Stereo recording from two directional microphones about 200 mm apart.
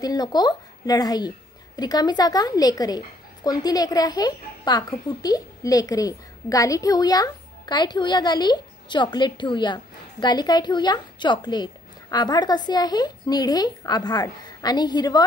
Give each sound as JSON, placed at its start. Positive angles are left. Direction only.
{"t": 0.0, "sound": "a woman's voice", "side_deg": 20}